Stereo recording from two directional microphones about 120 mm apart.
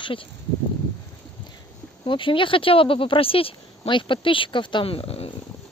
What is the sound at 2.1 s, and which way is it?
Speech, 45° left (ahead or behind).